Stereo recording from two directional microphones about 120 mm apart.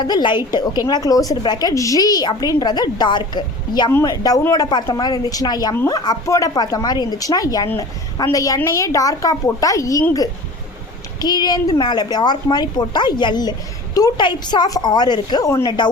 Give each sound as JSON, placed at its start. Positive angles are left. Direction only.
{"t": 0.0, "sound": "a woman's voice", "side_deg": 40}